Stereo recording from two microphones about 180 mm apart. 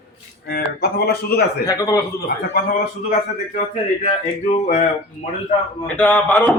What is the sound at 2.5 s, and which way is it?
Speech, 50° left (ahead or behind).